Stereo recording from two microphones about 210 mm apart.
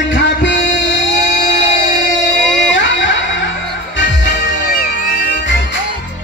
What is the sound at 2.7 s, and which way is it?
Music, 60° left (ahead or behind).